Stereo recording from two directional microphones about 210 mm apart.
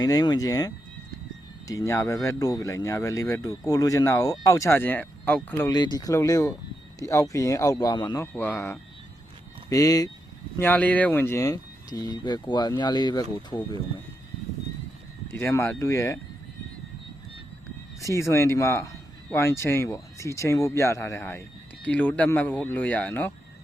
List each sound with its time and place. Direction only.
0.0 s speech: 20° left (ahead or behind)
5.7 s speech: 20° left (ahead or behind)
15.3 s speech: 10° left (ahead or behind)
18.1 s speech: 15° left (ahead or behind)